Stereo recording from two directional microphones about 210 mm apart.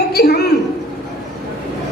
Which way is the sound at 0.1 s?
50° left (ahead or behind).